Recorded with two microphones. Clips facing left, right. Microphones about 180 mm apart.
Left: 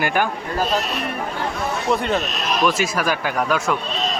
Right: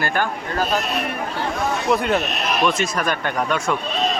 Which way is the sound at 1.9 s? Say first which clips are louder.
Right 1 dB; 5° right (ahead or behind).